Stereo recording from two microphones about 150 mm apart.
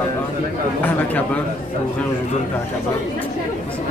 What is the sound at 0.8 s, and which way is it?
Speech, 10° left (ahead or behind).